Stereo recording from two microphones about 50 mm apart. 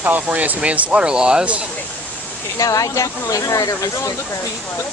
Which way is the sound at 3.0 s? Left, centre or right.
Left.